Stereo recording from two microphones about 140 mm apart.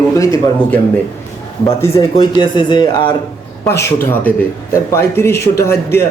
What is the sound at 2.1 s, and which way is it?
Speech, 35° left (ahead or behind).